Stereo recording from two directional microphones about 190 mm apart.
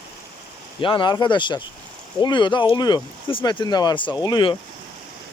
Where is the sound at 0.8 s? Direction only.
25° left (ahead or behind).